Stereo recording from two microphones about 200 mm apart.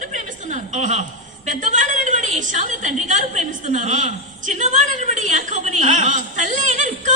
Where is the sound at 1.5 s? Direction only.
40° right (ahead or behind).